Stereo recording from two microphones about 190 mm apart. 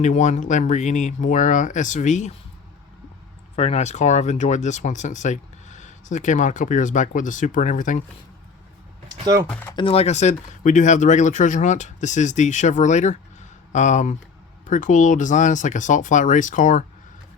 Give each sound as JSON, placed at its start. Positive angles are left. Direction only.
{"t": 0.0, "sound": "speech", "side_deg": 40}
{"t": 3.5, "sound": "speech", "side_deg": 35}
{"t": 9.0, "sound": "typing", "side_deg": -20}
{"t": 9.5, "sound": "speech", "side_deg": 10}
{"t": 9.7, "sound": "speech", "side_deg": 30}